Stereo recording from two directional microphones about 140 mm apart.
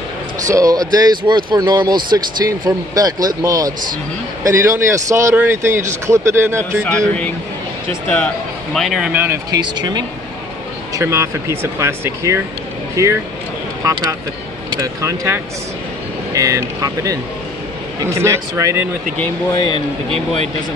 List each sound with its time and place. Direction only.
0.5 s a man's voice: 25° right (ahead or behind)
6.8 s speech: 10° left (ahead or behind)
8.7 s speech: centre (ahead or behind)
9.1 s speech: 15° right (ahead or behind)
9.5 s speech: 30° right (ahead or behind)
11.0 s a man's voice: 20° right (ahead or behind)